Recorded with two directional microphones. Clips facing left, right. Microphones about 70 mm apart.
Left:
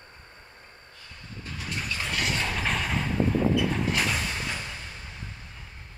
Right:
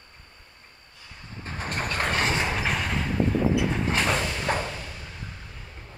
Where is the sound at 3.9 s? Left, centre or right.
Right.